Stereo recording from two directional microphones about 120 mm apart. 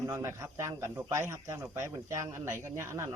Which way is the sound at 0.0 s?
20° right (ahead or behind).